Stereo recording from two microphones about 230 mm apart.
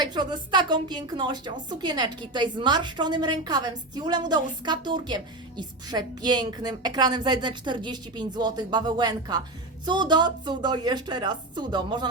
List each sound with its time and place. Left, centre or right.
0.0 s a woman's voice: centre